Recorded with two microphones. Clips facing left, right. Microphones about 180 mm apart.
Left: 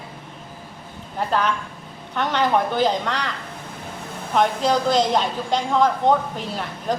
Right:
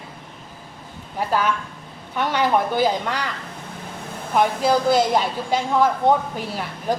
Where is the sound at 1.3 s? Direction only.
10° right (ahead or behind).